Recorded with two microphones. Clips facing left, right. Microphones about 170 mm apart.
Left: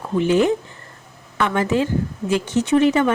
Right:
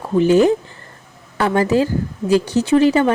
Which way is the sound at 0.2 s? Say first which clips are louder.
Right 4 dB; 40° right (ahead or behind).